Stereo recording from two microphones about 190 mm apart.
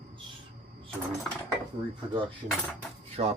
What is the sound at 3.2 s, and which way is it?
Speech, 30° right (ahead or behind).